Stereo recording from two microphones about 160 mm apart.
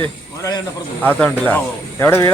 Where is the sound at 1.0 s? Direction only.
10° left (ahead or behind).